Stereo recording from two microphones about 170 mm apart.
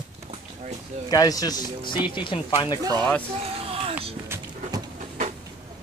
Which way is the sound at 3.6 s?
35° right (ahead or behind).